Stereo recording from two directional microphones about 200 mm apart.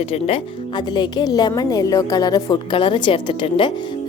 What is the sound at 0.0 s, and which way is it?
A woman's voice, 30° left (ahead or behind).